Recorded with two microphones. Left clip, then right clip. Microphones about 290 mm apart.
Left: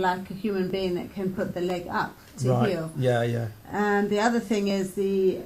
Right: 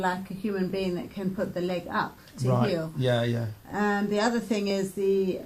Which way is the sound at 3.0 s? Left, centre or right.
Right.